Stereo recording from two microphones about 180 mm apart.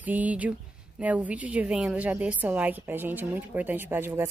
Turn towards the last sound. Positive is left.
turn(degrees=-10)  # may be behind; listen again after turning